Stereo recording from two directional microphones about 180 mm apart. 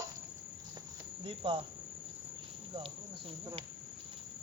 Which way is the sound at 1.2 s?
30° right (ahead or behind).